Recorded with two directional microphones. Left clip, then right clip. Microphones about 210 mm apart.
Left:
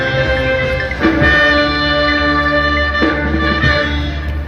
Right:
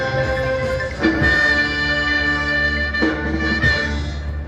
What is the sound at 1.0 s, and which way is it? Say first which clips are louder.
Music: left 5 dB; 40° right (ahead or behind).